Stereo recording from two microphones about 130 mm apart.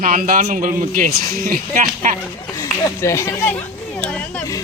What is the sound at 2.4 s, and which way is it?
Speech, 25° left (ahead or behind).